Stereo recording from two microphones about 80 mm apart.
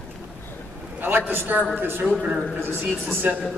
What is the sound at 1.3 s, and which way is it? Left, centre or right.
A woman's voice, right.